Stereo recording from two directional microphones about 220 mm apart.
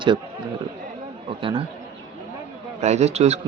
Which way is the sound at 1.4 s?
25° right (ahead or behind).